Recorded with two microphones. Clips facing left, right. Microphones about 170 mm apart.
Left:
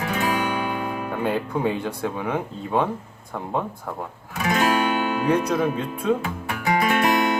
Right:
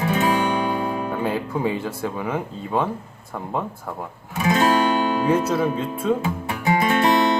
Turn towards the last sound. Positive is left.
turn(degrees=-25)  # may be behind; listen again after turning